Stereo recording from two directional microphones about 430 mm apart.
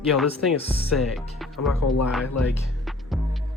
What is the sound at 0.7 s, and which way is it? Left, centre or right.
Music, centre.